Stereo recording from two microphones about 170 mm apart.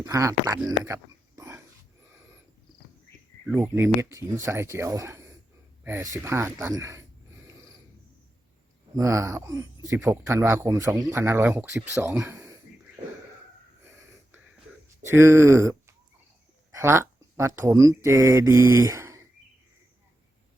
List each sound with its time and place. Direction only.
0.0 s speech: 20° right (ahead or behind)
1.4 s dog: 15° right (ahead or behind)
3.4 s speech: 10° right (ahead or behind)
7.4 s a sound: 15° right (ahead or behind)
9.0 s speech: 20° right (ahead or behind)
14.8 s speech: 15° right (ahead or behind)